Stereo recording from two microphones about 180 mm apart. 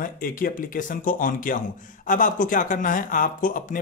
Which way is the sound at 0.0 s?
50° left (ahead or behind).